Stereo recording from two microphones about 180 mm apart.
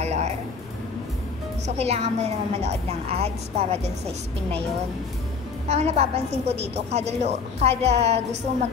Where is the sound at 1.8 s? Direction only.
35° right (ahead or behind).